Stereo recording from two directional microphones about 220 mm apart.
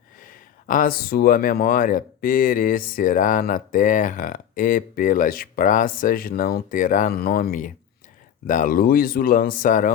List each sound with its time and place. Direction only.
0.2 s speech: 40° left (ahead or behind)